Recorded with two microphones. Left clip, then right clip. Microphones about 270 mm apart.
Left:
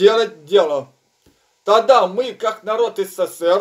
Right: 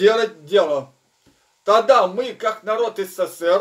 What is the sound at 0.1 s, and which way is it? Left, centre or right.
Speech, centre.